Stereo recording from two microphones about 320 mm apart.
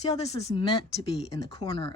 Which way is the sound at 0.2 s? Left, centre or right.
Centre.